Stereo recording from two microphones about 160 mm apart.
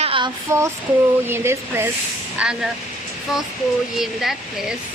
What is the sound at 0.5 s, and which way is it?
Speech, 20° right (ahead or behind).